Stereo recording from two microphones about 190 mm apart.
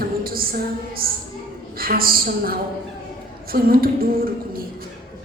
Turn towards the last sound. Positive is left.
turn(degrees=-50)  # may be behind; listen again after turning